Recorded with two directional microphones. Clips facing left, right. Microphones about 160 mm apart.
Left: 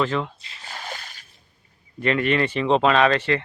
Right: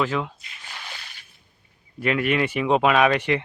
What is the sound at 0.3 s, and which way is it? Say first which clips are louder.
Drip: left 3 dB; 30° left (ahead or behind).